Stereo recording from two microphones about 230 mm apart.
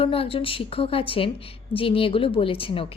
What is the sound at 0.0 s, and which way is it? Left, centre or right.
A woman's voice, left.